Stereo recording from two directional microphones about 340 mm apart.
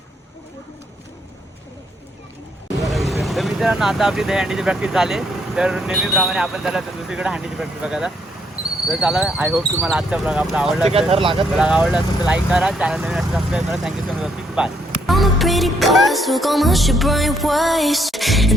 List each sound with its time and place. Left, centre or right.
2.9 s speech: centre
10.8 s speech: centre
11.5 s speech: centre